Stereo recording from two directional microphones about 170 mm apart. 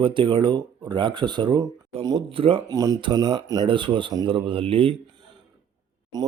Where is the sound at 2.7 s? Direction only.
20° right (ahead or behind).